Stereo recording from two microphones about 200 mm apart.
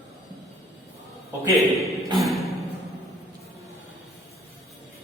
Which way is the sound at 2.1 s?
Centre (ahead or behind).